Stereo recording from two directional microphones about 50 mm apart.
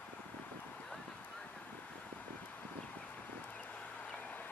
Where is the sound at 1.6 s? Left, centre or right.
Left.